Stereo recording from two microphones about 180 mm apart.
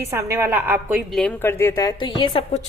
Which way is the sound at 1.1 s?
5° left (ahead or behind).